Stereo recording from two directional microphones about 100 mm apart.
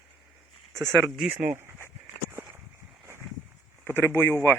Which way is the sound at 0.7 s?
Centre (ahead or behind).